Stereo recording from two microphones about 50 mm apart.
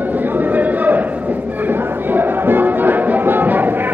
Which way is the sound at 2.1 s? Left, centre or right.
Right.